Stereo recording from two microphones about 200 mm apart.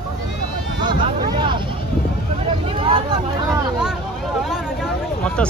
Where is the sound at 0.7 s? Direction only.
25° right (ahead or behind).